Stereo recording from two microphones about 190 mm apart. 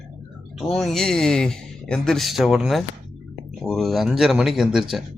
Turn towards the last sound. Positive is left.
turn(degrees=0)  # may be behind; listen again after turning